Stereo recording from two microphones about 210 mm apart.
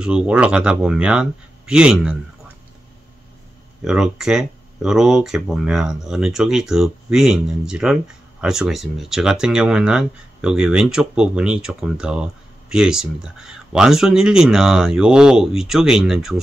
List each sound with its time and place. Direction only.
0.0 s speech: 5° right (ahead or behind)
3.8 s speech: 5° right (ahead or behind)